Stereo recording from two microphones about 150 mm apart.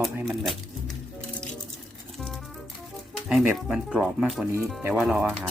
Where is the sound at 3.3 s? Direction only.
5° right (ahead or behind).